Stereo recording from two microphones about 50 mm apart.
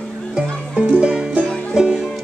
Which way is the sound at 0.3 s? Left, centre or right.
Right.